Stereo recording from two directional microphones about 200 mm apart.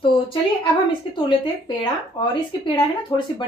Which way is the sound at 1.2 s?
25° left (ahead or behind).